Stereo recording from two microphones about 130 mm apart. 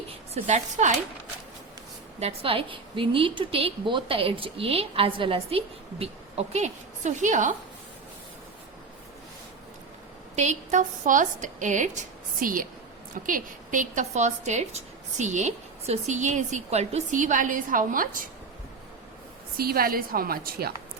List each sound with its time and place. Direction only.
0.4 s a woman's voice: 65° right (ahead or behind)
2.1 s a woman's voice: 50° right (ahead or behind); by 7.5 s 75° right (ahead or behind)
10.3 s a woman's voice: 65° right (ahead or behind); by 18.3 s 90° right
20.0 s a woman's voice: 90° right